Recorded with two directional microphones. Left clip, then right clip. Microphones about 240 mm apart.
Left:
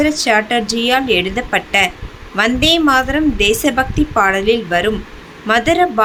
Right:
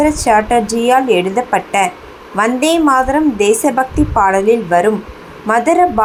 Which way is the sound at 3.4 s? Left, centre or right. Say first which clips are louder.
Right 1 dB; centre.